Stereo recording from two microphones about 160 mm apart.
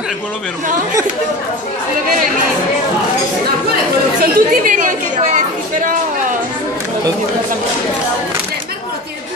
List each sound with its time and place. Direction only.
4.2 s speech: 55° right (ahead or behind)